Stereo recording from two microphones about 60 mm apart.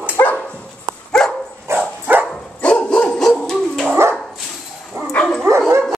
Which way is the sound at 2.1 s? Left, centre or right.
Right.